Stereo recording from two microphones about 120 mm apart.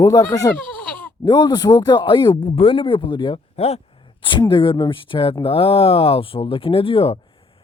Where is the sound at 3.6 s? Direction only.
60° left (ahead or behind).